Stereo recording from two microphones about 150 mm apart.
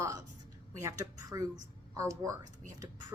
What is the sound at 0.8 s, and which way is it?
A woman's voice, 20° right (ahead or behind).